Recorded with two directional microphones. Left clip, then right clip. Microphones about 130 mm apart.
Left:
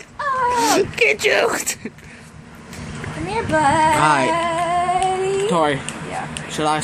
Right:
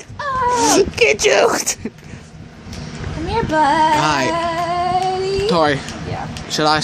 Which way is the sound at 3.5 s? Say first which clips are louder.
Right 2 dB; 60° right (ahead or behind).